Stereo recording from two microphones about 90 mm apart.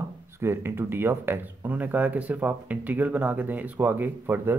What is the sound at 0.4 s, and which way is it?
A man's voice, 30° right (ahead or behind).